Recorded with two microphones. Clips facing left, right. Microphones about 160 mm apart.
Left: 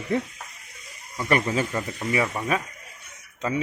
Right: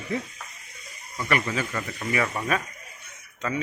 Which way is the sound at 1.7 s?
20° left (ahead or behind).